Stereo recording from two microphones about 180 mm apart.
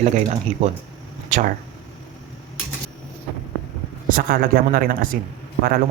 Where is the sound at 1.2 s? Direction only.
45° right (ahead or behind).